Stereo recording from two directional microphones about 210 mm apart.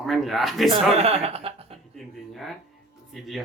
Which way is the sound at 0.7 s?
30° right (ahead or behind).